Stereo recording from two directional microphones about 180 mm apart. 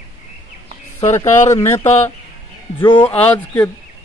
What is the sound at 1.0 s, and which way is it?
Speech, 20° left (ahead or behind).